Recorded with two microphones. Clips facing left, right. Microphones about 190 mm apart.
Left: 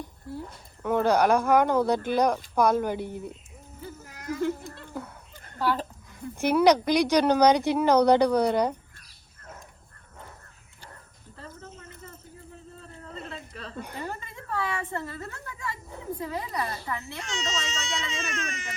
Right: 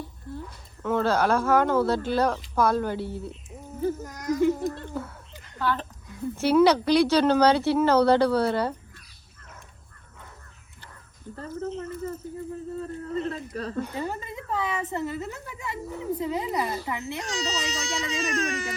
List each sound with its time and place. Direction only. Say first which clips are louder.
0.8 s speech: left 1 dB; 15° left (ahead or behind)
3.8 s a sound: right 14 dB; 45° right (ahead or behind)
5.5 s a woman's voice: left 1 dB; 10° left (ahead or behind)
12.8 s a sound: right 11 dB; 40° right (ahead or behind)
13.9 s a woman's voice: right 5 dB; 15° right (ahead or behind)
17.2 s speech: right 1 dB; 35° right (ahead or behind)